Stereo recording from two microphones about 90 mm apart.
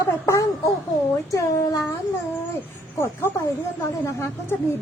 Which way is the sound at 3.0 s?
30° left (ahead or behind).